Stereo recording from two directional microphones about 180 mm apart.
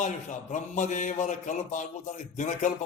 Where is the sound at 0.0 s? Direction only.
40° left (ahead or behind).